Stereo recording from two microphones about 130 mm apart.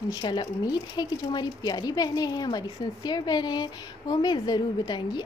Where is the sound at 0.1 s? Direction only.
35° left (ahead or behind).